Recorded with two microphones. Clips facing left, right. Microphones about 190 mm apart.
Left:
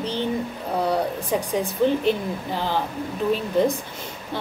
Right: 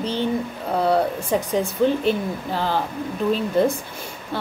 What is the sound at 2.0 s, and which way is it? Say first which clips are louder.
Speech: right 1 dB; 15° left (ahead or behind).